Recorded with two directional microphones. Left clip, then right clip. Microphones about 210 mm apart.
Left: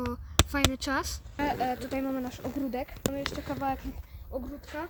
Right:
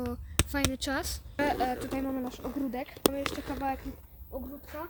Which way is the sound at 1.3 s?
15° right (ahead or behind).